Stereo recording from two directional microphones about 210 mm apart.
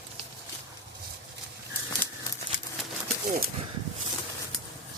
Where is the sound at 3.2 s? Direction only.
45° right (ahead or behind).